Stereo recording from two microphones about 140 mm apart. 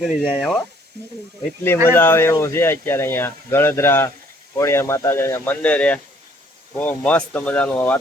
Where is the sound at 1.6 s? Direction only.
15° left (ahead or behind).